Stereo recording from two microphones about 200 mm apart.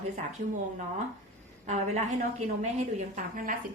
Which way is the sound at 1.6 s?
35° right (ahead or behind).